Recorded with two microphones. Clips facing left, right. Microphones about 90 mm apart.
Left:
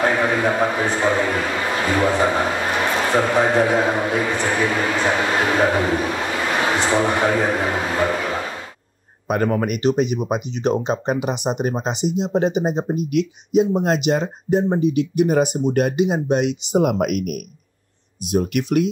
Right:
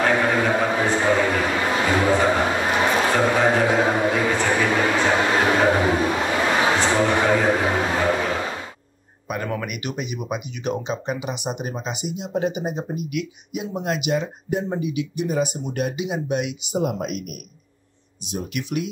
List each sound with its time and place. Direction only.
0.1 s a sound: 5° left (ahead or behind)
1.3 s a man's voice: 5° right (ahead or behind)
2.4 s a sound: 5° right (ahead or behind)
3.0 s a sound: 5° left (ahead or behind)
3.3 s speech: centre (ahead or behind)
6.8 s a man's voice: 10° left (ahead or behind)
9.3 s speech: 50° left (ahead or behind)
9.6 s speech: 35° left (ahead or behind)
15.1 s speech: 55° left (ahead or behind); by 16.5 s 40° left (ahead or behind)
16.7 s speech: 65° left (ahead or behind)
18.6 s speech: 45° left (ahead or behind)